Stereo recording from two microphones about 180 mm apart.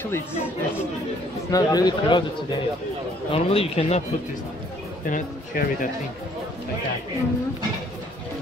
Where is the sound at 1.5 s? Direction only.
20° left (ahead or behind).